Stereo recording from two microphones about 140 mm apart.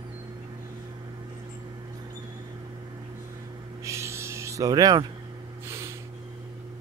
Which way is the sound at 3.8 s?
20° right (ahead or behind).